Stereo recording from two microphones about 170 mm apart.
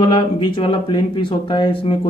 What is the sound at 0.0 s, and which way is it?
Speech, 25° left (ahead or behind).